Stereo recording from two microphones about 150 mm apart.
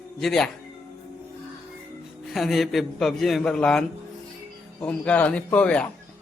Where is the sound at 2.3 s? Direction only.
Centre (ahead or behind).